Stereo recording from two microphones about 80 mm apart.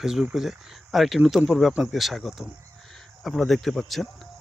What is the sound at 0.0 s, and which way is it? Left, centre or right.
Speech, centre.